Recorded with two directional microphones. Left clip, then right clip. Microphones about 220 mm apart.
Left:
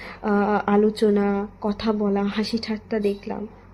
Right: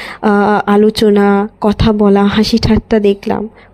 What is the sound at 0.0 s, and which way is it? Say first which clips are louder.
Speech: right 11 dB; 40° right (ahead or behind).